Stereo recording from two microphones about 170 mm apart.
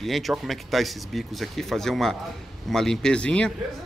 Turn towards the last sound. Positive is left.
turn(degrees=5)  # may be behind; listen again after turning